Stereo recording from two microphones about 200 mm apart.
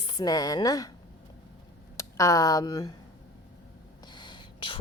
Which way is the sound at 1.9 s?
15° left (ahead or behind).